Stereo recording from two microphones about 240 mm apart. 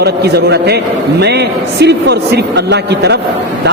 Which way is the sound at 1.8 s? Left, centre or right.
Right.